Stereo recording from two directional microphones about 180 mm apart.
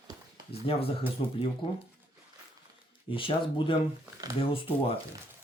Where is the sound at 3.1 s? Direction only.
30° left (ahead or behind).